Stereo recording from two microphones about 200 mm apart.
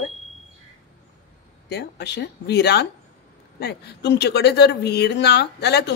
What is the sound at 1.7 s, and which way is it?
A woman's voice, 55° left (ahead or behind).